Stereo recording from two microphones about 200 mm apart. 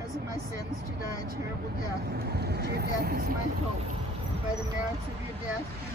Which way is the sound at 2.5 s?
55° right (ahead or behind).